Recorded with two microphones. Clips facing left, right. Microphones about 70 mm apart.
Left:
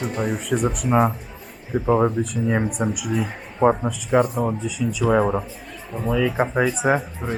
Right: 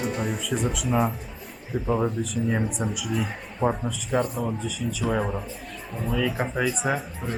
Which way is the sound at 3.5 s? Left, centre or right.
Left.